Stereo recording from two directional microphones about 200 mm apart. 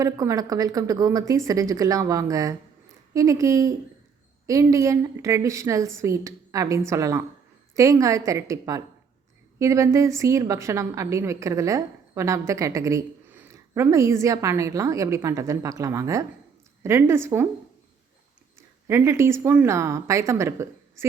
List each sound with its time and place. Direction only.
0.0 s a woman's voice: 15° right (ahead or behind)
18.9 s a woman's voice: 15° right (ahead or behind)